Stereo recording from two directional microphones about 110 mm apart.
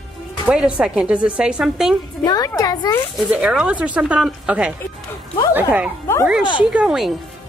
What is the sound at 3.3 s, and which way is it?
A woman's voice, 10° right (ahead or behind).